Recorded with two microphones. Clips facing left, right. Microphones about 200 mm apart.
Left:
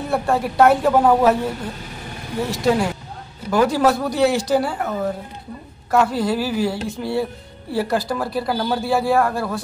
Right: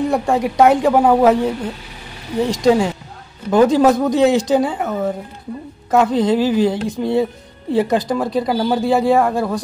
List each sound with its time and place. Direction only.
0.1 s speech: 15° right (ahead or behind)
5.9 s speech: 20° right (ahead or behind)